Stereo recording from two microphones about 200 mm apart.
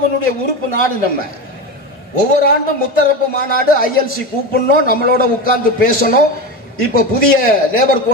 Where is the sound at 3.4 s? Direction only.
45° left (ahead or behind).